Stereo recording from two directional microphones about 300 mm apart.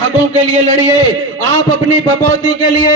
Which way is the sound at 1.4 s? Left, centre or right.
Right.